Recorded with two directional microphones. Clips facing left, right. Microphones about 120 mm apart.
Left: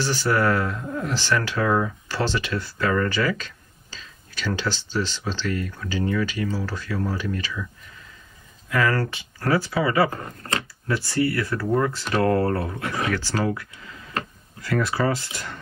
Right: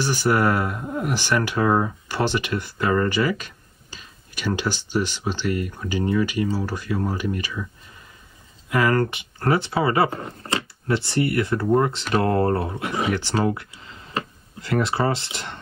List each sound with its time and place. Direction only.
0.0 s speech: 15° right (ahead or behind)
8.6 s speech: 15° right (ahead or behind)